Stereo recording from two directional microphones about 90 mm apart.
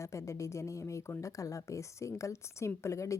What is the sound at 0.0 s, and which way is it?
A woman's voice, 35° left (ahead or behind).